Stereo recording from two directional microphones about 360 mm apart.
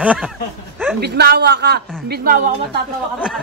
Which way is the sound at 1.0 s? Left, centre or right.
Right.